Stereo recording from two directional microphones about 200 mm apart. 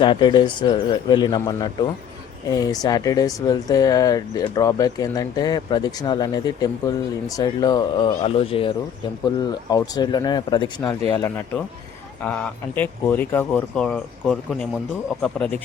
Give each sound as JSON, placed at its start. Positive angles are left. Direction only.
{"t": 0.0, "sound": "speech", "side_deg": 25}